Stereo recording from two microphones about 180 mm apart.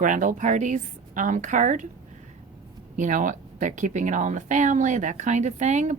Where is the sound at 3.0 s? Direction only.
45° right (ahead or behind).